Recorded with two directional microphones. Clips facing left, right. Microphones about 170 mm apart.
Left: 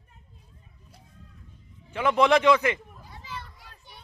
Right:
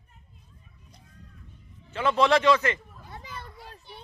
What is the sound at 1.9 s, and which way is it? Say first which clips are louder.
Speech: left 1 dB; 15° left (ahead or behind).